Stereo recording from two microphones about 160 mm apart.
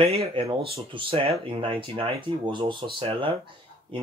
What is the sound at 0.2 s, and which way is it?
Speech, 35° right (ahead or behind).